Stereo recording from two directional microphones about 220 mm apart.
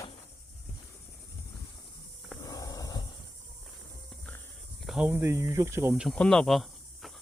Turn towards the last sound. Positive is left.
turn(degrees=0)  # may be behind; listen again after turning